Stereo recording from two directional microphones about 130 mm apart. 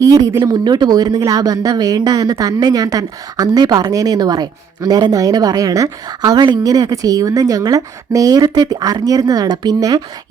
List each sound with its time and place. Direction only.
0.0 s speech: 25° right (ahead or behind)